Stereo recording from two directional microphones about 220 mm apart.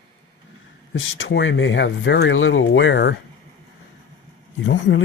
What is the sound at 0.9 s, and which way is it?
Speech, 60° left (ahead or behind).